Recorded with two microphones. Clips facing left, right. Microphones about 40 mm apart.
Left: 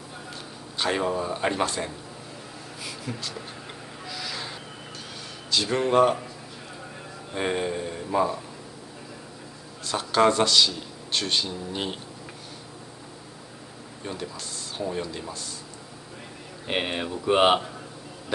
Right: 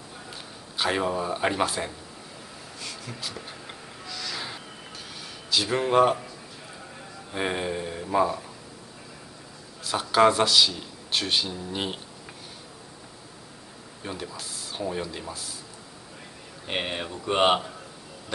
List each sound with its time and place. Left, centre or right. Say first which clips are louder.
0.3 s a man's voice: left 2 dB; centre
2.8 s a sound: left 4 dB; centre
3.2 s speech: left 1 dB; centre
4.0 s music: left 1 dB; centre
5.5 s speech: even; centre
7.3 s speech: left 1 dB; centre
9.8 s speech: right 1 dB; centre
14.0 s speech: left 1 dB; centre
16.6 s speech: left 2 dB; centre